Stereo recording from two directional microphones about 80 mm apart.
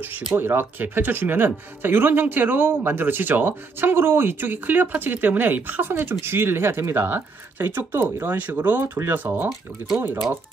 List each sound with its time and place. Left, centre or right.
0.4 s speech: right